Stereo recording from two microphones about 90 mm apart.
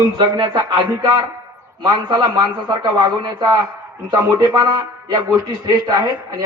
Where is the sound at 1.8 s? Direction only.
55° right (ahead or behind).